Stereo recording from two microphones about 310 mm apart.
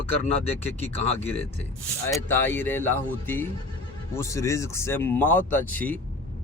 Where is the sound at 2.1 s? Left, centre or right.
Centre.